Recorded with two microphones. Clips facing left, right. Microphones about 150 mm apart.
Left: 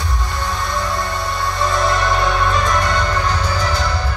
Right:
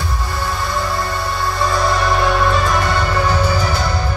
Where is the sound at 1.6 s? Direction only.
Centre (ahead or behind).